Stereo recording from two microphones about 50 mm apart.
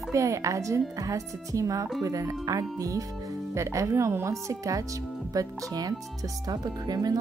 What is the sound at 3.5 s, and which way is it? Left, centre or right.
Speech, right.